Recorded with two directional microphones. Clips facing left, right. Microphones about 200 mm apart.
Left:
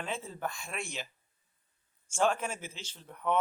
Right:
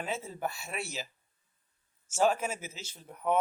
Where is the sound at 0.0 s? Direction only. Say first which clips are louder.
Right 2 dB; 10° right (ahead or behind).